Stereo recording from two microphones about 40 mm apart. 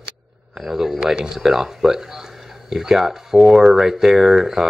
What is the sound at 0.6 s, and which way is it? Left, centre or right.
Speech, centre.